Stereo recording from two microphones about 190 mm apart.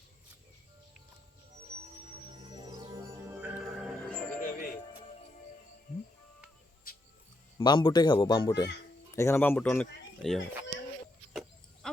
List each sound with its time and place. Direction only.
1.8 s music: 25° right (ahead or behind); by 3.8 s 5° right (ahead or behind)
4.4 s music: 45° left (ahead or behind)
4.9 s music: 30° left (ahead or behind)
6.9 s music: 50° left (ahead or behind)
7.6 s a child's voice: 25° left (ahead or behind); by 10.4 s 5° left (ahead or behind)